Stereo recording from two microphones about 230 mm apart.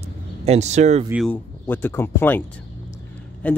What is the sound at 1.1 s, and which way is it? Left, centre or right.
Speech, centre.